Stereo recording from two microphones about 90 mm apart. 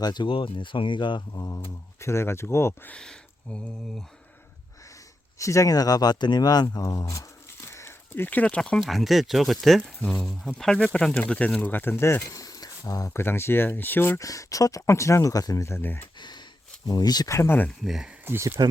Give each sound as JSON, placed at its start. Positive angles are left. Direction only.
{"t": 0.0, "sound": "speech", "side_deg": 50}
{"t": 0.3, "sound": "speech", "side_deg": 75}
{"t": 1.3, "sound": "speech", "side_deg": 40}
{"t": 2.9, "sound": "speech", "side_deg": 10}
{"t": 5.4, "sound": "speech", "side_deg": 35}
{"t": 8.8, "sound": "speech", "side_deg": 0}
{"t": 12.3, "sound": "a sound", "side_deg": 40}
{"t": 13.1, "sound": "speech", "side_deg": 25}
{"t": 14.2, "sound": "speech", "side_deg": 40}
{"t": 16.1, "sound": "a sound", "side_deg": 55}
{"t": 17.2, "sound": "speech", "side_deg": 30}
{"t": 17.8, "sound": "speech", "side_deg": 0}
{"t": 18.3, "sound": "speech", "side_deg": -30}